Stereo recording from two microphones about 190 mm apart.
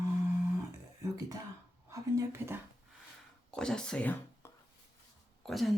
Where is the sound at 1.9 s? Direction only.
15° right (ahead or behind).